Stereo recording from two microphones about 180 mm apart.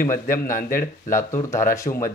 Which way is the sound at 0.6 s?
50° left (ahead or behind).